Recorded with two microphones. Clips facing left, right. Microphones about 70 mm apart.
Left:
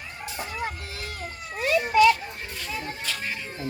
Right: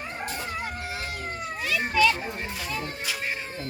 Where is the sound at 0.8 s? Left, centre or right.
Right.